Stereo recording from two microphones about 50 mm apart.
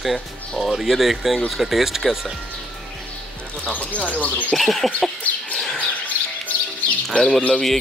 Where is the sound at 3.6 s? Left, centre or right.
Left.